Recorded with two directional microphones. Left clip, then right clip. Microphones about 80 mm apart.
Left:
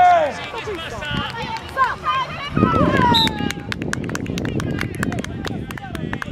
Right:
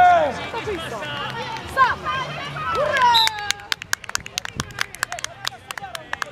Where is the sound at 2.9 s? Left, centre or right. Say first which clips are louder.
Even; right.